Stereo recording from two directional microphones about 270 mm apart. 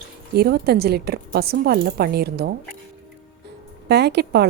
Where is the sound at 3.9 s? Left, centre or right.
Right.